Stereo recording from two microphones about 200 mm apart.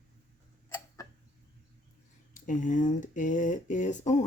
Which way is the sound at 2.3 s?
40° left (ahead or behind).